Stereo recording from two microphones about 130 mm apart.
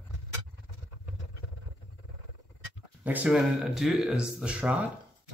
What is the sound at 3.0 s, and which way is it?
Speech, 10° right (ahead or behind).